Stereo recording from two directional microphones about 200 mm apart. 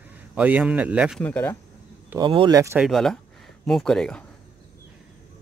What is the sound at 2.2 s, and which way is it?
Speech, 25° right (ahead or behind).